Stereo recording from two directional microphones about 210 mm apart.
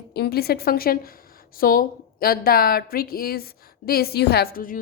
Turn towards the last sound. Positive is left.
turn(degrees=45)  # may be behind; listen again after turning